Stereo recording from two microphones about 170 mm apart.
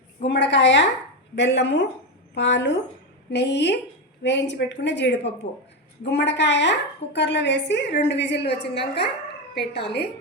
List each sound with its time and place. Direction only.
0.3 s a woman's voice: 90° left